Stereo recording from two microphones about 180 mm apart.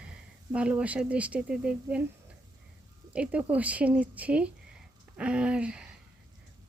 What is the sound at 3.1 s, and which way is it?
Speech, 5° right (ahead or behind).